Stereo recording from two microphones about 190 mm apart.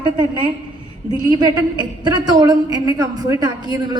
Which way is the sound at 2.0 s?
20° right (ahead or behind).